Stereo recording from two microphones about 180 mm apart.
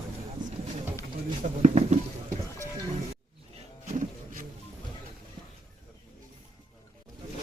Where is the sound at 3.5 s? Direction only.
45° right (ahead or behind).